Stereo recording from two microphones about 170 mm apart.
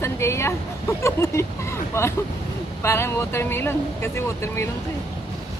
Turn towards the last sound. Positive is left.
turn(degrees=15)  # may be behind; listen again after turning